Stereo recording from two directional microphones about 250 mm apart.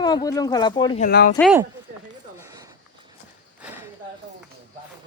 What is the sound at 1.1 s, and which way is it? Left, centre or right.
Speech, left.